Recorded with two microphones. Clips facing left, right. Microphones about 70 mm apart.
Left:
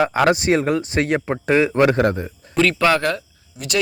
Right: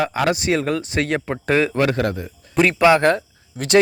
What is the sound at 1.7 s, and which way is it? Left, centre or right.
Speech, left.